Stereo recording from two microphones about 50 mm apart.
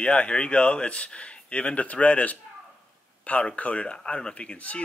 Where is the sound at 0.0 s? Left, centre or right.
Centre.